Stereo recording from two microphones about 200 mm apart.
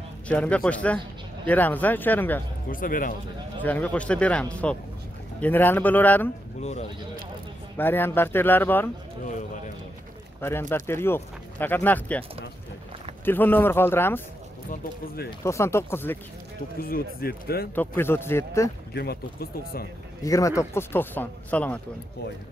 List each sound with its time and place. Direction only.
0.3 s speech: 5° left (ahead or behind)
2.7 s speech: 45° left (ahead or behind)
3.6 s speech: 10° left (ahead or behind)
6.6 s speech: 35° left (ahead or behind)
7.7 s speech: 10° left (ahead or behind)
10.4 s speech: 10° left (ahead or behind)
15.4 s speech: 15° left (ahead or behind)
16.8 s speech: 50° left (ahead or behind)
17.7 s speech: 10° left (ahead or behind)
18.9 s speech: 50° left (ahead or behind)
20.2 s speech: 15° left (ahead or behind)